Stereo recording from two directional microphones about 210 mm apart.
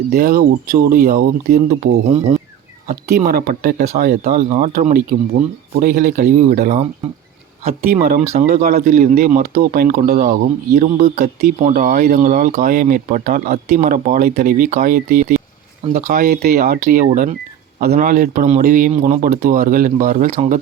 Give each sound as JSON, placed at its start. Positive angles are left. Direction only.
{"t": 0.1, "sound": "speech", "side_deg": -45}
{"t": 1.8, "sound": "speech", "side_deg": -75}
{"t": 2.9, "sound": "speech", "side_deg": -40}
{"t": 7.9, "sound": "speech", "side_deg": -45}